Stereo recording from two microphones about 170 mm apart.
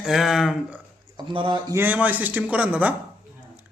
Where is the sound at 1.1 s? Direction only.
30° right (ahead or behind).